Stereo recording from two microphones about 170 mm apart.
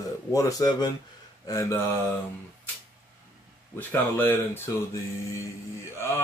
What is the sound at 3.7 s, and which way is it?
Speech, 10° left (ahead or behind).